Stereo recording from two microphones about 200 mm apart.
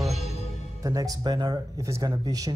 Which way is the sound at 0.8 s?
20° right (ahead or behind).